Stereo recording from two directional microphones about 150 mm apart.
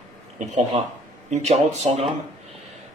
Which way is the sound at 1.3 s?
45° right (ahead or behind).